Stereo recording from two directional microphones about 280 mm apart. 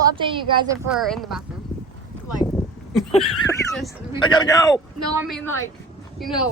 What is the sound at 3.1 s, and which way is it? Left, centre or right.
Neigh, centre.